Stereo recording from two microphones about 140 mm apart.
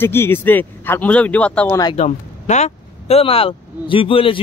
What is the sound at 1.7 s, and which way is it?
Speech, 25° left (ahead or behind).